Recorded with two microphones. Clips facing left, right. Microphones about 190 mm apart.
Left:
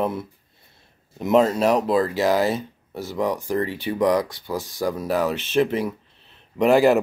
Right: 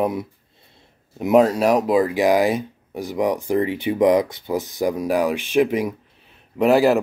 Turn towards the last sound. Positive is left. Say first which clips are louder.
# right 1 dB
turn(degrees=0)  # may be behind; listen again after turning